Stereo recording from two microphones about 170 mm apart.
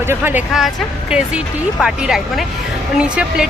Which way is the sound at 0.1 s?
10° right (ahead or behind).